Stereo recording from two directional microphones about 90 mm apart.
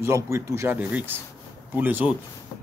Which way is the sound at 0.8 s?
15° right (ahead or behind).